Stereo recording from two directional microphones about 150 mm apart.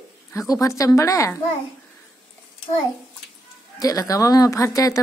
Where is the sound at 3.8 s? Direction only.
20° left (ahead or behind).